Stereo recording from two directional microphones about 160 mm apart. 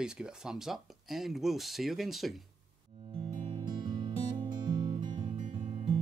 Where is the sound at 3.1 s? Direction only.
30° right (ahead or behind).